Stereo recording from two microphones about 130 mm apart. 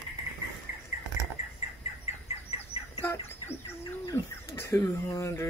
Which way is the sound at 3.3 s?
20° left (ahead or behind).